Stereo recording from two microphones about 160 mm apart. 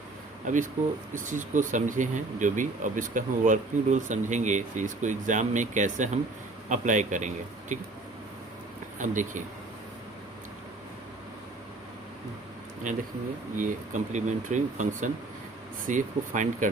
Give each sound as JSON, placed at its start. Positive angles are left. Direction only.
{"t": 0.4, "sound": "speech", "side_deg": -55}
{"t": 9.0, "sound": "speech", "side_deg": -50}
{"t": 13.6, "sound": "speech", "side_deg": -50}